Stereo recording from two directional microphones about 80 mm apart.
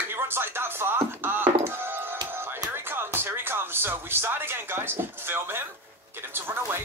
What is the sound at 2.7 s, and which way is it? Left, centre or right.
Speech, right.